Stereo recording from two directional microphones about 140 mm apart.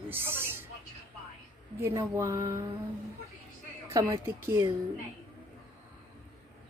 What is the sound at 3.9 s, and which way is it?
Speech, 20° right (ahead or behind).